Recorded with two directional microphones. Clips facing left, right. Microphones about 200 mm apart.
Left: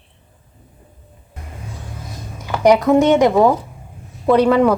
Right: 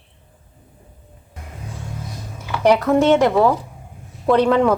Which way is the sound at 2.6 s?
15° left (ahead or behind).